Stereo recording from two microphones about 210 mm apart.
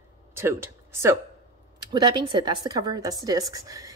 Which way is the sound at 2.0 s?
20° right (ahead or behind).